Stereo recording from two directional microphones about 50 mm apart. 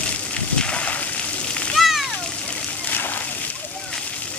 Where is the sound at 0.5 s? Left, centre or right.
Left.